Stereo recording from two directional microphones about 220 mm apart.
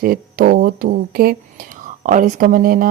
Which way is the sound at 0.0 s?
40° right (ahead or behind).